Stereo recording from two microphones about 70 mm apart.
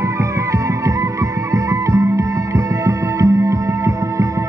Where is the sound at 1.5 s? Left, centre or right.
Right.